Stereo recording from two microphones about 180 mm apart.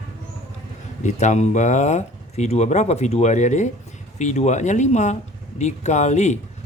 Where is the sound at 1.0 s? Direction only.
40° left (ahead or behind).